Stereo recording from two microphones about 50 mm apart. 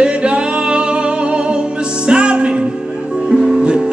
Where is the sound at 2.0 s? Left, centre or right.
Centre.